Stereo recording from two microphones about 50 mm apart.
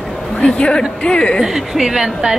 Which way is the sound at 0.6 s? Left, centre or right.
Centre.